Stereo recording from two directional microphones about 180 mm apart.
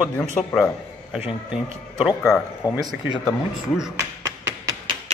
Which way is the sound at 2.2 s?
15° left (ahead or behind).